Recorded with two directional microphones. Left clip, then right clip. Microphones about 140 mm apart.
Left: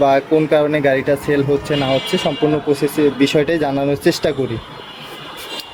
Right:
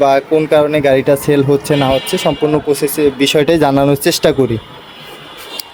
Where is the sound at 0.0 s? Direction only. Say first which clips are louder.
Right 3 dB; 40° right (ahead or behind).